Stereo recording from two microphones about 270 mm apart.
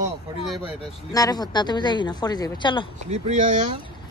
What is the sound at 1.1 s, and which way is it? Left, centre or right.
Speech, centre.